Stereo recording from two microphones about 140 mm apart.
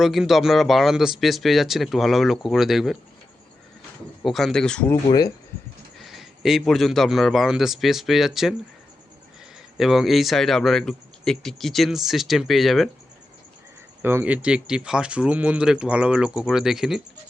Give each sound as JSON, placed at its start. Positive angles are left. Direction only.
{"t": 0.0, "sound": "speech", "side_deg": 0}
{"t": 4.2, "sound": "speech", "side_deg": 0}
{"t": 5.0, "sound": "speech", "side_deg": 30}
{"t": 6.0, "sound": "speech", "side_deg": 0}
{"t": 9.7, "sound": "speech", "side_deg": 0}
{"t": 14.0, "sound": "speech", "side_deg": -15}